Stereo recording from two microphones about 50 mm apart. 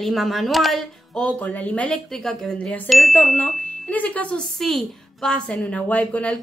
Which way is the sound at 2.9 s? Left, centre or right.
Centre.